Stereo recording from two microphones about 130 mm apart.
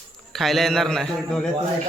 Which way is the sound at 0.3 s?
Centre (ahead or behind).